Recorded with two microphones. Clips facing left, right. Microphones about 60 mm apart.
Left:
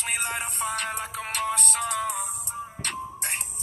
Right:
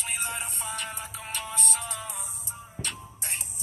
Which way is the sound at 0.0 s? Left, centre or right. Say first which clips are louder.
Left 4 dB; left.